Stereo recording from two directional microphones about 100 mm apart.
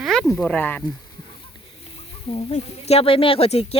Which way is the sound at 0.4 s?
15° left (ahead or behind).